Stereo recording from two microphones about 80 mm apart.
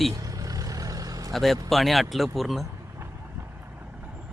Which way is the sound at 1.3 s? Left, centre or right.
Centre.